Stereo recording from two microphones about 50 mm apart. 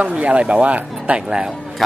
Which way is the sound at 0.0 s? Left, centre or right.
Right.